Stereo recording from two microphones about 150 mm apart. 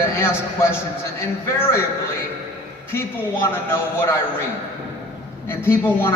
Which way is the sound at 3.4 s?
20° left (ahead or behind).